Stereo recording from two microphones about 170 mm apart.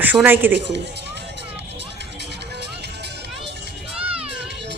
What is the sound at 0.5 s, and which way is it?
Speech, 90° right.